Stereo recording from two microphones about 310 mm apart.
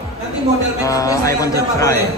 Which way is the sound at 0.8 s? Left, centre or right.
Centre.